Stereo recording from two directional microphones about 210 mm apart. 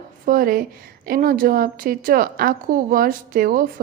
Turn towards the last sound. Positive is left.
turn(degrees=-40)  # may be behind; listen again after turning